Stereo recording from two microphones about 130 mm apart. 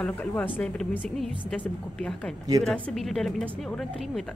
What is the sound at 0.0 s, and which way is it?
Speech, 10° left (ahead or behind).